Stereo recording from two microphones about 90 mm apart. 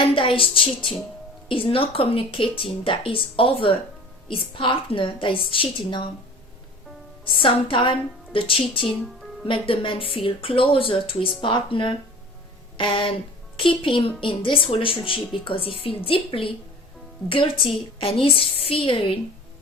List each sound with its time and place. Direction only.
0.1 s speech: 85° left; by 6.1 s 65° left (ahead or behind)
7.3 s speech: 75° left (ahead or behind)
12.7 s a sound: 70° left (ahead or behind)
13.6 s a woman's voice: 75° left (ahead or behind)